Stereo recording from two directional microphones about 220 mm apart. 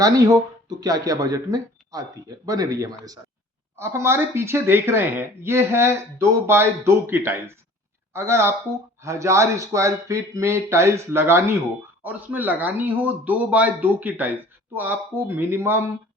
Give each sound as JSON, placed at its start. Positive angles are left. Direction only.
{"t": 0.0, "sound": "speech", "side_deg": -15}